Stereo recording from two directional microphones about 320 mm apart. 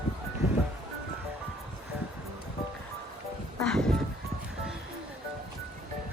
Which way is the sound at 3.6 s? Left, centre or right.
Centre.